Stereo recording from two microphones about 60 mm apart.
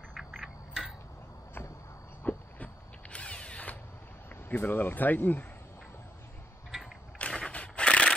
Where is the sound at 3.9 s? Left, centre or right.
Left.